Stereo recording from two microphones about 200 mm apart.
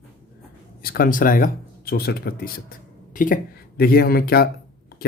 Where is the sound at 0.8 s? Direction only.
45° left (ahead or behind).